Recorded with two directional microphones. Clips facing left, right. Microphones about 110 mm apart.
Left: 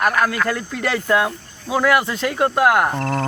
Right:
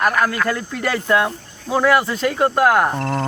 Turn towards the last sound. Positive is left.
turn(degrees=-5)  # may be behind; listen again after turning